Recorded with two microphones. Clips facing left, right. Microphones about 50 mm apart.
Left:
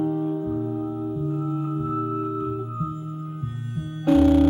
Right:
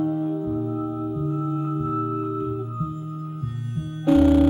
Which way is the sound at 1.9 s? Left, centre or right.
Centre.